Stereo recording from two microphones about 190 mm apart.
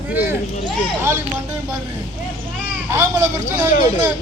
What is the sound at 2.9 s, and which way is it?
A man's voice, 15° right (ahead or behind).